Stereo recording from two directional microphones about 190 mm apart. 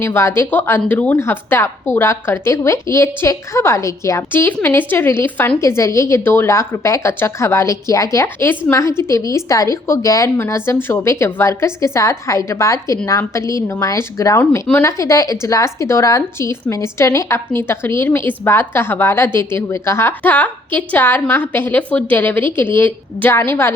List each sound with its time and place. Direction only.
0.0 s a woman's voice: 15° left (ahead or behind)